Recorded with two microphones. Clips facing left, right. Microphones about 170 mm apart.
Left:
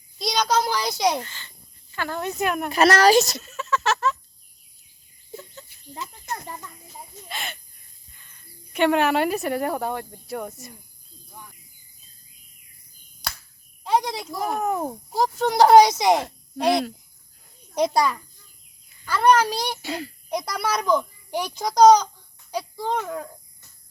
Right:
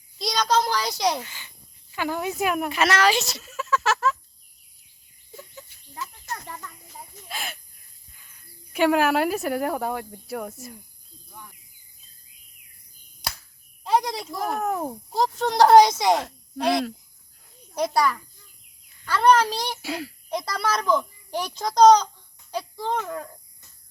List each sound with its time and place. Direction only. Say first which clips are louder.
0.2 s a child's voice: even; 5° left (ahead or behind)
1.2 s speech: left 2 dB; 10° right (ahead or behind)
2.6 s speech: left 7 dB; 40° left (ahead or behind)
3.4 s a sound: even; 5° right (ahead or behind)
5.9 s a sound: left 2 dB; 20° left (ahead or behind)
7.3 s speech: even; 5° right (ahead or behind)
13.8 s a child's voice: even; centre (ahead or behind); by 18.2 s 20° left (ahead or behind)
18.9 s a child's voice: even; 5° left (ahead or behind)
19.8 s speech: even; 5° right (ahead or behind)
20.3 s a child's voice: left 1 dB; 15° left (ahead or behind)